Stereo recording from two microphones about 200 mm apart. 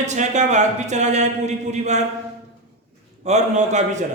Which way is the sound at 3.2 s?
35° right (ahead or behind).